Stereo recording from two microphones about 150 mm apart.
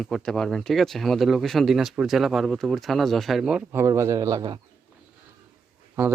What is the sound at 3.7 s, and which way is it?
Speech, 20° right (ahead or behind).